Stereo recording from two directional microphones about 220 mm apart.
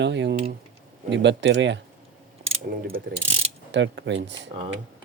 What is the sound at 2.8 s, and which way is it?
Speech, 40° right (ahead or behind).